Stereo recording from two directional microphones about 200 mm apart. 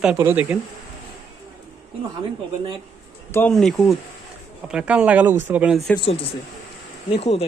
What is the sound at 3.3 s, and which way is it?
Speech, 5° left (ahead or behind).